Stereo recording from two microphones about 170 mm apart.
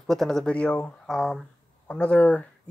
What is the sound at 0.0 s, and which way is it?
Speech, centre (ahead or behind).